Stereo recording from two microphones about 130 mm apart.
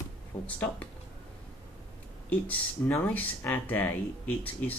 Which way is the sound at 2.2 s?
15° left (ahead or behind).